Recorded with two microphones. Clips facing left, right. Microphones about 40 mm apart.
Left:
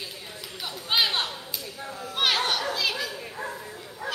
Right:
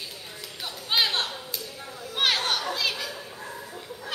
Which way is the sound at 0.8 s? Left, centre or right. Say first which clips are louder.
Even; centre.